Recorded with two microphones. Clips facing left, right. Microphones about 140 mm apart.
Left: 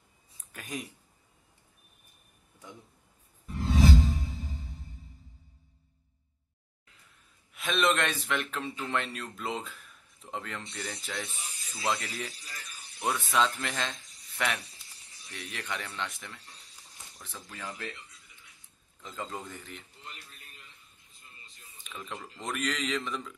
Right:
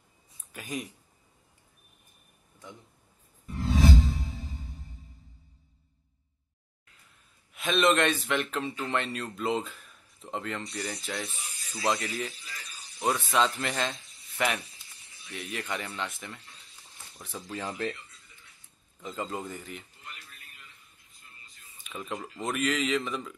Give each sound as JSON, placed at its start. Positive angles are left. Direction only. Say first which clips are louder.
{"t": 0.5, "sound": "speech", "louder": "right 3 dB", "side_deg": 0}
{"t": 3.6, "sound": "music", "louder": "even", "side_deg": 0}
{"t": 7.5, "sound": "speech", "louder": "right 3 dB", "side_deg": 0}
{"t": 17.3, "sound": "speech", "louder": "right 6 dB", "side_deg": -30}
{"t": 18.9, "sound": "speech", "louder": "right 4 dB", "side_deg": -10}
{"t": 21.9, "sound": "speech", "louder": "right 5 dB", "side_deg": -5}